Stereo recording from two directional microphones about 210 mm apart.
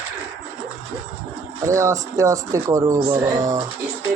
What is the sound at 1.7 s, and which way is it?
Speech, 15° right (ahead or behind).